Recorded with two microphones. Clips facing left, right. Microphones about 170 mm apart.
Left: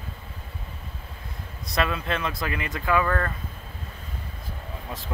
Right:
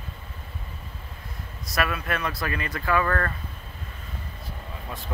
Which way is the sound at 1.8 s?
25° left (ahead or behind).